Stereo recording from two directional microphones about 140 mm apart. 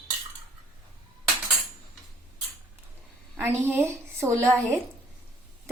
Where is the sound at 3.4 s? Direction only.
15° right (ahead or behind).